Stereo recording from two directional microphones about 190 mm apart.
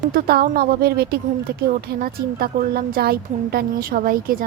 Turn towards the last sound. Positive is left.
turn(degrees=-50)  # may be behind; listen again after turning